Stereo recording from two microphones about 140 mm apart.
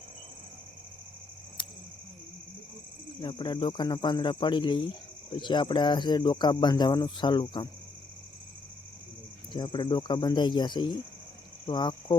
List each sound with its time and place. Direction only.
3.2 s speech: 35° left (ahead or behind)
9.5 s speech: 35° left (ahead or behind)